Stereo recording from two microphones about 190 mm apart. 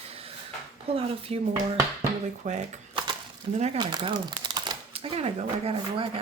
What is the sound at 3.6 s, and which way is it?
Speech, 30° right (ahead or behind).